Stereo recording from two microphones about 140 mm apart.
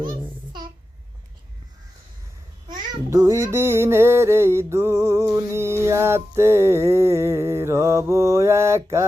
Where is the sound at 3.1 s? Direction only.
20° right (ahead or behind).